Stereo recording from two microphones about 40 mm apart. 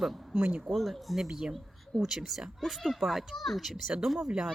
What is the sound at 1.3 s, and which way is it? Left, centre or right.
A child's voice, centre.